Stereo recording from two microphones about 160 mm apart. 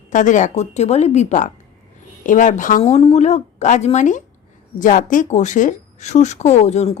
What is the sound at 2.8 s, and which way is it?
Speech, 35° left (ahead or behind).